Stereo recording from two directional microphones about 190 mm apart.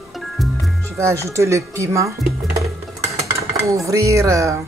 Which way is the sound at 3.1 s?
15° right (ahead or behind).